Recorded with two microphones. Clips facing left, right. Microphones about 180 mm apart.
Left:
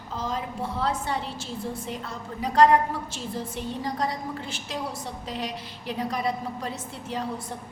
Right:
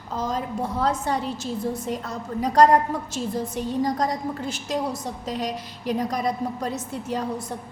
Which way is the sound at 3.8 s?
40° right (ahead or behind).